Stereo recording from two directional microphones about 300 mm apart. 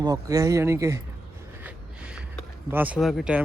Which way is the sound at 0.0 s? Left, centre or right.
Centre.